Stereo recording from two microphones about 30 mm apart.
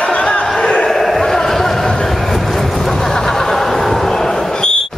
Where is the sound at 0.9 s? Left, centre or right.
Centre.